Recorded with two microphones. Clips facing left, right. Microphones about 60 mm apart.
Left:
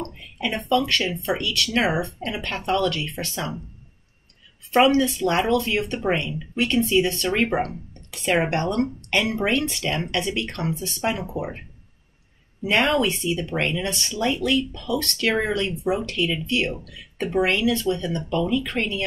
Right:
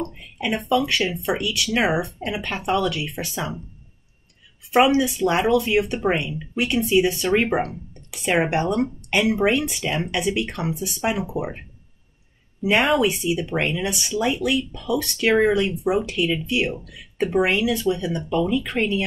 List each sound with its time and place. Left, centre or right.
0.0 s speech: centre
4.6 s speech: centre
12.6 s speech: centre
15.7 s speech: right
16.0 s speech: centre